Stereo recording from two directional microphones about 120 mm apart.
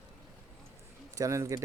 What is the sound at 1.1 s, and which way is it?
Speech, 25° right (ahead or behind).